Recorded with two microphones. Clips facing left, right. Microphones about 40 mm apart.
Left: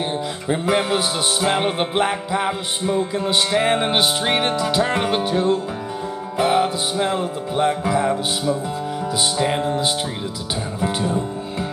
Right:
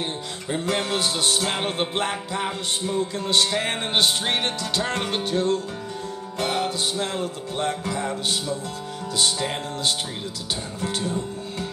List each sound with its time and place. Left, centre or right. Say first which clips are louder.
0.5 s music: left 5 dB; centre
10.8 s speech: left 6 dB; centre